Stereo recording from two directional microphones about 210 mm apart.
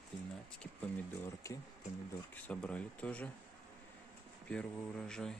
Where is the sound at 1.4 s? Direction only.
15° left (ahead or behind).